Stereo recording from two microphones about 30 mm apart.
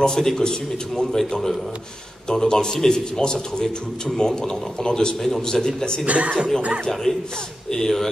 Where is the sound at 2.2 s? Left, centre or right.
Centre.